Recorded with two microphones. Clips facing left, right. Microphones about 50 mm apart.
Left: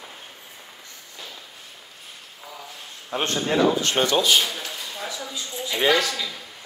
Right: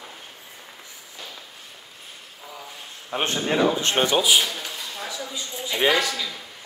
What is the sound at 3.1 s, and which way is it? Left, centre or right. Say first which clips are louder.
A man's voice: even; centre.